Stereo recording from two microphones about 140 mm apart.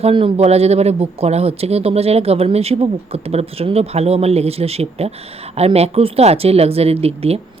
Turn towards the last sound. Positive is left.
turn(degrees=-45)  # may be behind; listen again after turning